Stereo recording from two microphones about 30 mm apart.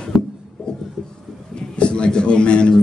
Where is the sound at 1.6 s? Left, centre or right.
Left.